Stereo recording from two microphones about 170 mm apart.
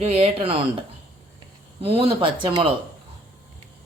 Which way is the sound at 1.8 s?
35° right (ahead or behind).